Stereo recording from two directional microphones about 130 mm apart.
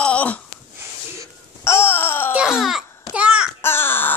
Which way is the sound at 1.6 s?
20° left (ahead or behind).